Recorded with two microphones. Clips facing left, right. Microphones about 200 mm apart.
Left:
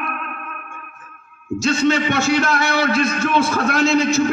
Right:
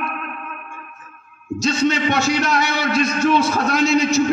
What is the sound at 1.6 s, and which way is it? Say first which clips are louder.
A man's voice: left 1 dB; 55° left (ahead or behind).